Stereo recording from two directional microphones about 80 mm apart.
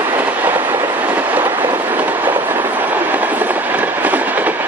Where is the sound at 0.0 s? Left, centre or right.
Right.